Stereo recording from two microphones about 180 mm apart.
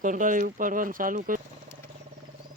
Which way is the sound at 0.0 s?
45° right (ahead or behind).